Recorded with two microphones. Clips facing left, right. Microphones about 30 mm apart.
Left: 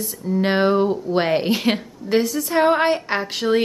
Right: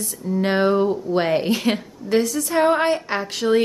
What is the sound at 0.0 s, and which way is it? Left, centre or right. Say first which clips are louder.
Speech: left 1 dB; centre.